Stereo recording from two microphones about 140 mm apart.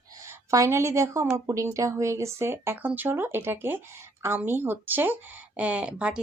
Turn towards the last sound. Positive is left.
turn(degrees=-5)  # may be behind; listen again after turning